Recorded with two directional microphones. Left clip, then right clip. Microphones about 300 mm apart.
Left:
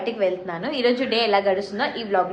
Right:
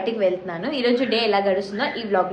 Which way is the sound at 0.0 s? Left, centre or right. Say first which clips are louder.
Right 1 dB; centre.